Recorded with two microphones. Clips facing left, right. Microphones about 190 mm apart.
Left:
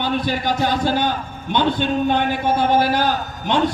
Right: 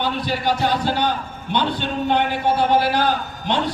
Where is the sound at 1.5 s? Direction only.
50° left (ahead or behind).